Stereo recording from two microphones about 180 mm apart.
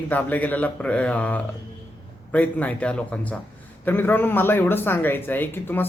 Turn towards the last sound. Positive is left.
turn(degrees=10)  # may be behind; listen again after turning